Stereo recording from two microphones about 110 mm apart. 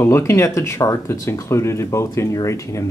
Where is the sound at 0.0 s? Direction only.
25° left (ahead or behind).